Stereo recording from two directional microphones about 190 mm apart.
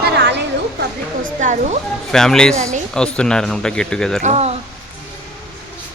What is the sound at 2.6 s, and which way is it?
Speech, 40° right (ahead or behind).